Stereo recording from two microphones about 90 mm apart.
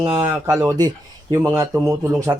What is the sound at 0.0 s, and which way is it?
Speech, 50° right (ahead or behind).